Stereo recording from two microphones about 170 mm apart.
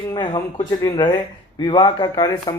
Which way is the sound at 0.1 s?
25° left (ahead or behind).